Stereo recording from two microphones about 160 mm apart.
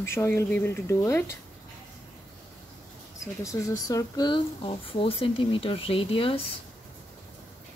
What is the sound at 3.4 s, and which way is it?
Speech, 20° left (ahead or behind).